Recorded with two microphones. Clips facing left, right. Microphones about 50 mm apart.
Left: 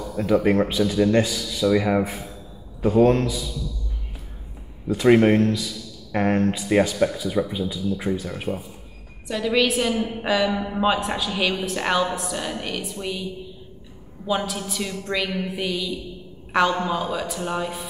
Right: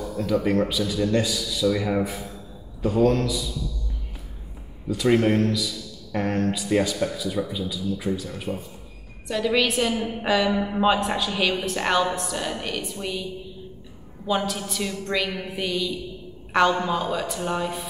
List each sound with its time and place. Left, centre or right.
0.1 s speech: left
4.9 s speech: left
9.3 s a woman's voice: centre